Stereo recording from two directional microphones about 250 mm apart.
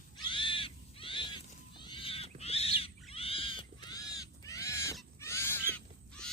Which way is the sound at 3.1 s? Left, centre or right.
Left.